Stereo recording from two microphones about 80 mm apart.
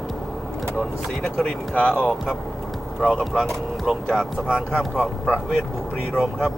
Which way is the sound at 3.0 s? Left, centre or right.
Centre.